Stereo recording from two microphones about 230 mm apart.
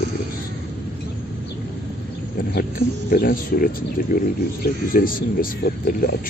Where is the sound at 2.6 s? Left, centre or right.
Left.